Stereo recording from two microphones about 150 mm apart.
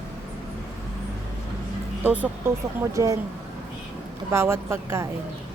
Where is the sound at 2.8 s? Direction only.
20° right (ahead or behind).